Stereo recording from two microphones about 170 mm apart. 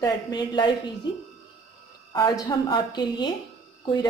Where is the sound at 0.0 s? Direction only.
25° left (ahead or behind).